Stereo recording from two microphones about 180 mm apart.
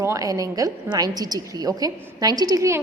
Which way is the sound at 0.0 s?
20° right (ahead or behind).